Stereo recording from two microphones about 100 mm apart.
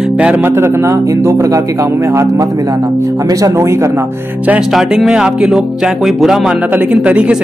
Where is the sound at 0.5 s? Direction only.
25° right (ahead or behind).